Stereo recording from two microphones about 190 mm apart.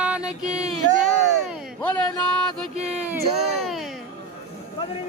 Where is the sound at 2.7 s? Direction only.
35° right (ahead or behind).